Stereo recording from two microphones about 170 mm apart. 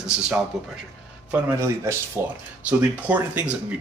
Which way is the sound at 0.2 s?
5° right (ahead or behind).